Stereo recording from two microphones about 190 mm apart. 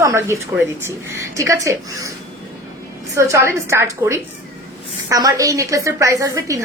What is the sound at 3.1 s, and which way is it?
A woman's voice, 15° right (ahead or behind).